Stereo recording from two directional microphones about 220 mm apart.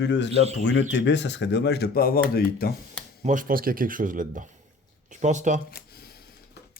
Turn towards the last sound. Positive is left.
turn(degrees=-35)  # may be behind; listen again after turning